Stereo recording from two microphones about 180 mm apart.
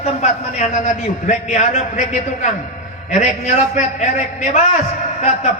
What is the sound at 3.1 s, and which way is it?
A man's voice, 40° left (ahead or behind).